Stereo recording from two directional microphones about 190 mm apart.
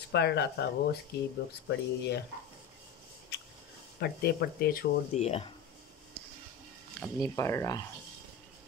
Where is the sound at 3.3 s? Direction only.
65° left (ahead or behind).